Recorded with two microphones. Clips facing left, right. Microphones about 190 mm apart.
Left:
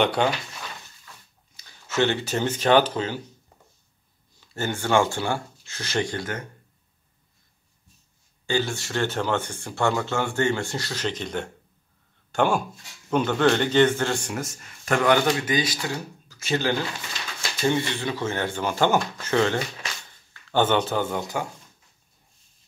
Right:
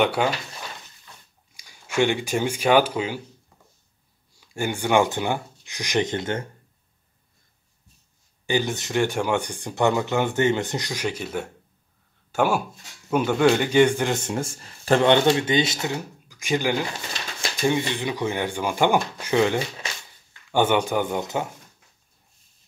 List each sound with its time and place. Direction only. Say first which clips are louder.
0.0 s speech: even; 10° right (ahead or behind)
1.6 s speech: right 1 dB; 10° right (ahead or behind)
4.4 s speech: right 2 dB; 15° right (ahead or behind)
8.5 s speech: right 2 dB; 15° right (ahead or behind)